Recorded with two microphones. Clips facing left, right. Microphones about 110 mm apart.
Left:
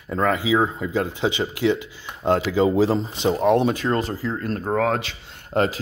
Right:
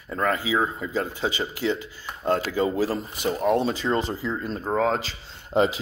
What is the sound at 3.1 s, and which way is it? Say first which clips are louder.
Speech: left 5 dB; 25° left (ahead or behind).